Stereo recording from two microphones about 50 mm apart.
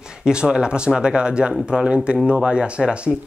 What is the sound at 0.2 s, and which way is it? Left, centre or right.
Speech, centre.